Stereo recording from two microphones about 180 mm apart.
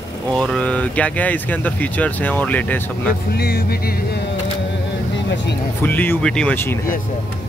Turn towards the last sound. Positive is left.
turn(degrees=10)  # may be behind; listen again after turning